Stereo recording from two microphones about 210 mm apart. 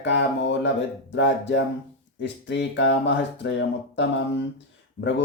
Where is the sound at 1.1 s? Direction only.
60° left (ahead or behind).